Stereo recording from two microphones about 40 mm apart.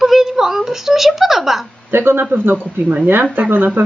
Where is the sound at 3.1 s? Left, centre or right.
Right.